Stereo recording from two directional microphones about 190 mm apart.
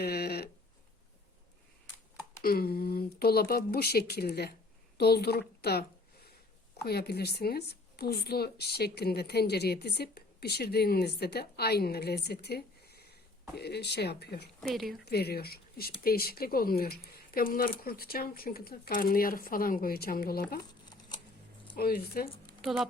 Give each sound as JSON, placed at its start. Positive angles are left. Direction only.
{"t": 0.0, "sound": "speech", "side_deg": 55}
{"t": 2.4, "sound": "speech", "side_deg": 50}
{"t": 6.8, "sound": "speech", "side_deg": 55}
{"t": 14.6, "sound": "a woman's voice", "side_deg": 0}
{"t": 15.0, "sound": "speech", "side_deg": 55}
{"t": 21.8, "sound": "speech", "side_deg": 55}